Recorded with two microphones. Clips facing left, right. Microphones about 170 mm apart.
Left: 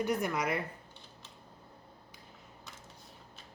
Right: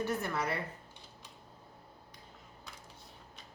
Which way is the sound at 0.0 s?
15° left (ahead or behind).